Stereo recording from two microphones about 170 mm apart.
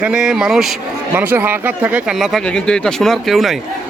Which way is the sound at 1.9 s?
Centre (ahead or behind).